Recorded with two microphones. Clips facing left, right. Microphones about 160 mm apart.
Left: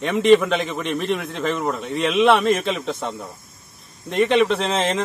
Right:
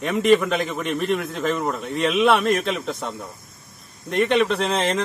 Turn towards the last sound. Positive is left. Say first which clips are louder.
# left 1 dB
turn(degrees=0)  # may be behind; listen again after turning